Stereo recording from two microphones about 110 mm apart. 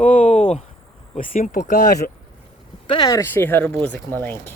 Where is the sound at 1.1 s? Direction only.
90° left.